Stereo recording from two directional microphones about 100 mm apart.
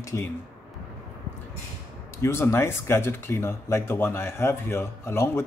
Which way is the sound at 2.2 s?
25° left (ahead or behind).